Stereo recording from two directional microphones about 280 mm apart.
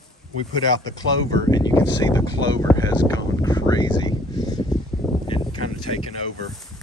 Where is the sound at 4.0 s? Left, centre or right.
Centre.